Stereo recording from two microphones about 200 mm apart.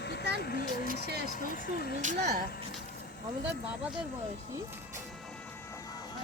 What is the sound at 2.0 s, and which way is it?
Speech, 40° right (ahead or behind).